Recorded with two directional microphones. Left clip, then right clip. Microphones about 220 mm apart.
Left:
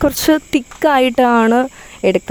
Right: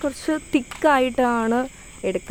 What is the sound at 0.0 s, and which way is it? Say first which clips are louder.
Speech: left 11 dB; 45° left (ahead or behind).